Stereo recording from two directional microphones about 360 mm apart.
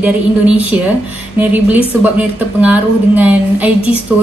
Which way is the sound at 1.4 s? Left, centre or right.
Centre.